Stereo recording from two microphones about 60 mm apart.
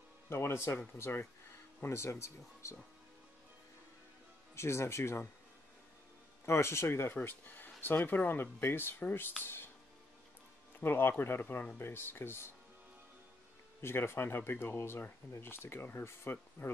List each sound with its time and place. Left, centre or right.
0.3 s speech: left
4.6 s speech: left
6.4 s speech: left
7.2 s speech: left
10.8 s speech: left
13.7 s speech: left